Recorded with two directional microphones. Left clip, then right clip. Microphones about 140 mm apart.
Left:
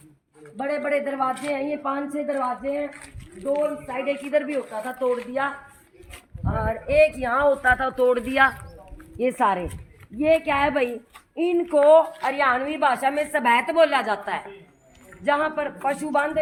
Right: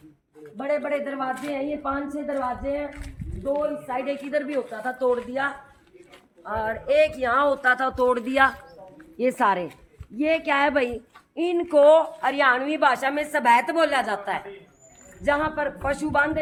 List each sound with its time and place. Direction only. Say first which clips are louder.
0.6 s a woman's voice: left 1 dB; 15° left (ahead or behind)
6.6 s speech: left 2 dB; 5° right (ahead or behind)
9.1 s a woman's voice: even; 5° left (ahead or behind)
10.8 s a woman's voice: even; 10° left (ahead or behind); by 16.0 s 15° right (ahead or behind)
16.0 s a woman's voice: right 3 dB; centre (ahead or behind)